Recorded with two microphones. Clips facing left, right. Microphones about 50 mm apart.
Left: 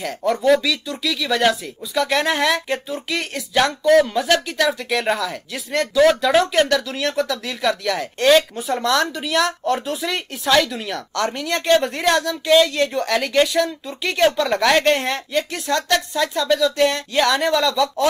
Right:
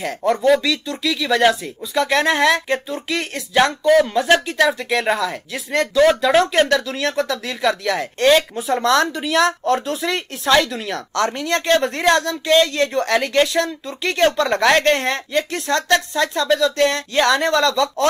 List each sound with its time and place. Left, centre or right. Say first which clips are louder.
0.2 s speech: right 1 dB; centre